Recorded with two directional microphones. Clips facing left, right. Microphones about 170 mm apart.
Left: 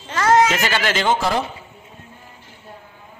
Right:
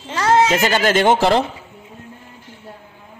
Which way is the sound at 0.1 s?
25° right (ahead or behind).